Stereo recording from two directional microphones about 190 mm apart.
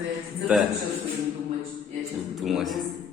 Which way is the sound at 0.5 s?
5° right (ahead or behind).